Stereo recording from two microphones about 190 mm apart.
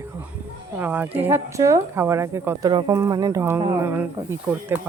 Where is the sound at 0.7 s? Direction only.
10° right (ahead or behind).